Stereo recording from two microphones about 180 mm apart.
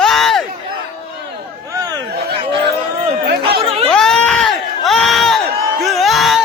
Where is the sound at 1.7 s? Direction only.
20° right (ahead or behind).